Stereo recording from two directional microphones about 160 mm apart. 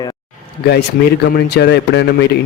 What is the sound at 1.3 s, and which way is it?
A man's voice, 90° left.